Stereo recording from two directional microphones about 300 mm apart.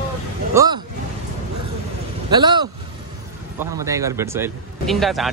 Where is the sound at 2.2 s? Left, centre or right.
Centre.